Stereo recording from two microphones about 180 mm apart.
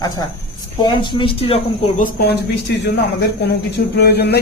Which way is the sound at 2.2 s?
70° left (ahead or behind).